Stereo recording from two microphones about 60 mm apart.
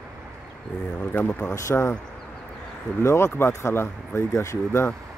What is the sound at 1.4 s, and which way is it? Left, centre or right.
Speech, left.